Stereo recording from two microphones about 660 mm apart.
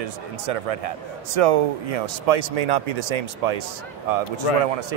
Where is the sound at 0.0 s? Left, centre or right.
Right.